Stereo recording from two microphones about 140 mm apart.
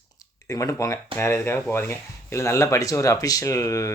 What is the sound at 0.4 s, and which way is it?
Speech, 20° left (ahead or behind).